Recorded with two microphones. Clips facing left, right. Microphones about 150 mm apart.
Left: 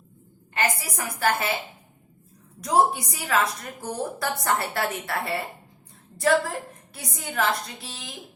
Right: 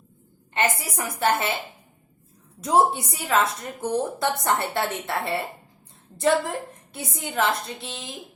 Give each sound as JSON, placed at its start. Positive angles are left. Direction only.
{"t": 0.5, "sound": "a woman's voice", "side_deg": -30}
{"t": 2.6, "sound": "a woman's voice", "side_deg": -25}